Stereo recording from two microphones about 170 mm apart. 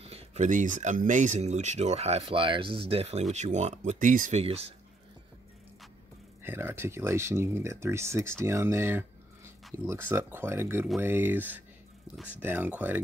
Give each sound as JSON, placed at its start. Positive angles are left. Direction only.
{"t": 0.0, "sound": "speech", "side_deg": -40}
{"t": 6.4, "sound": "speech", "side_deg": -15}